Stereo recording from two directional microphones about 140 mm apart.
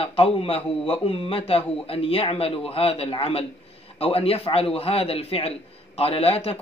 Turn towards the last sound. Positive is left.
turn(degrees=45)  # may be behind; listen again after turning